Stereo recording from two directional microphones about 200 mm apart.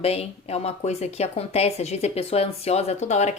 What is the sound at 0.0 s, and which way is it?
Speech, 30° left (ahead or behind).